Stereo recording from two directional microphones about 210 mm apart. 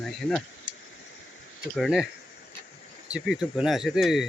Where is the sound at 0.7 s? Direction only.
55° right (ahead or behind).